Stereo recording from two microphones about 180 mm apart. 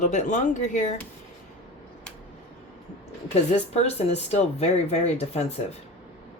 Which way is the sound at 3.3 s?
35° left (ahead or behind).